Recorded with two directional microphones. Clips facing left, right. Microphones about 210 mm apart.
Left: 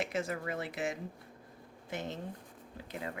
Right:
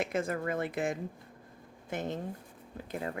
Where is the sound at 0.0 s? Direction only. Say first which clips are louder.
Right 3 dB; 55° right (ahead or behind).